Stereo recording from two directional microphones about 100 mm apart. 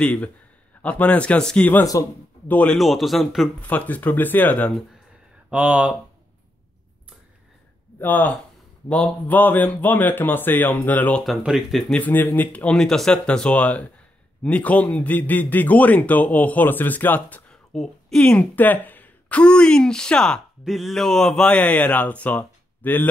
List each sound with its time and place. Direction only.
0.0 s speech: 15° left (ahead or behind)
2.7 s speech: centre (ahead or behind)
3.6 s speech: 15° left (ahead or behind)
5.5 s speech: 15° right (ahead or behind)
8.0 s speech: 15° left (ahead or behind)
11.2 s speech: centre (ahead or behind)
12.0 s speech: 15° left (ahead or behind)
17.7 s speech: 5° left (ahead or behind)